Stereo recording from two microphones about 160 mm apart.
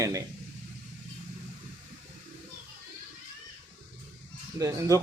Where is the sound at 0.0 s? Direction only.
20° right (ahead or behind).